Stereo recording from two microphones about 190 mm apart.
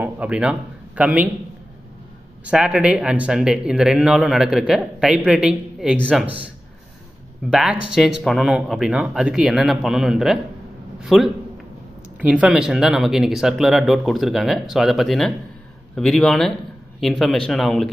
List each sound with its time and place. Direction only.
0.0 s a man's voice: 5° right (ahead or behind)
2.4 s speech: 5° right (ahead or behind)
7.5 s a man's voice: 5° right (ahead or behind)